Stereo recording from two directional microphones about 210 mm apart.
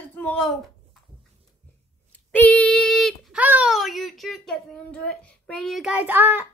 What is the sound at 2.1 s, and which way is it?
Speech, 5° left (ahead or behind).